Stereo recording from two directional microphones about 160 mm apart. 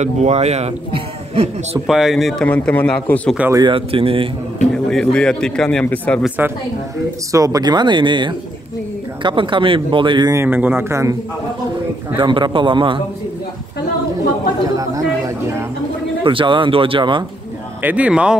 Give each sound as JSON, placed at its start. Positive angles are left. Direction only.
{"t": 0.0, "sound": "speech", "side_deg": -45}
{"t": 1.9, "sound": "a man's voice", "side_deg": 0}
{"t": 3.3, "sound": "speech", "side_deg": -15}
{"t": 3.6, "sound": "speech", "side_deg": -35}
{"t": 4.7, "sound": "a man's voice", "side_deg": 5}
{"t": 6.2, "sound": "speech", "side_deg": -10}
{"t": 7.3, "sound": "speech", "side_deg": -20}
{"t": 10.3, "sound": "speech", "side_deg": -15}
{"t": 12.2, "sound": "speech", "side_deg": -30}
{"t": 14.8, "sound": "speech", "side_deg": -20}
{"t": 16.3, "sound": "speech", "side_deg": -30}
{"t": 17.8, "sound": "speech", "side_deg": -10}